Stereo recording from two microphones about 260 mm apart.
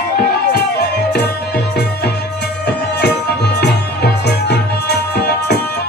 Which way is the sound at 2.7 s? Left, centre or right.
Left.